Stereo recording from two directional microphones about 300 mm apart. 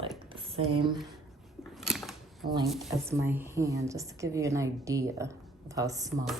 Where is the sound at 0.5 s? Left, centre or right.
Centre.